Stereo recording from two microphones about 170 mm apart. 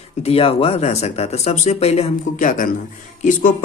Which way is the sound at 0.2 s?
35° left (ahead or behind).